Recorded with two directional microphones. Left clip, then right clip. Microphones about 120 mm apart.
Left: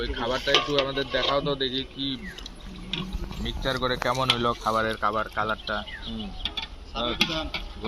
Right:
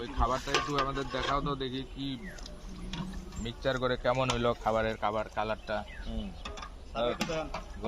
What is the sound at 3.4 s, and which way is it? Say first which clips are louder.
Speech: left 4 dB; 40° right (ahead or behind).